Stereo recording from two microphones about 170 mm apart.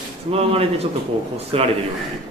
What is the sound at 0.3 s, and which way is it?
A man's voice, 35° right (ahead or behind).